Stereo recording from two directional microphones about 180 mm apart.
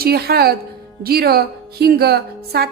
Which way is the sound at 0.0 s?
60° right (ahead or behind).